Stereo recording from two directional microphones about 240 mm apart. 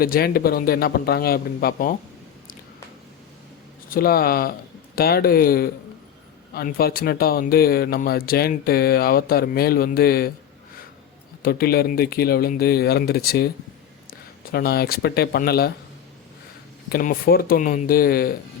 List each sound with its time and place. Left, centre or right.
0.0 s speech: left
3.8 s speech: left
11.4 s speech: left
16.9 s speech: left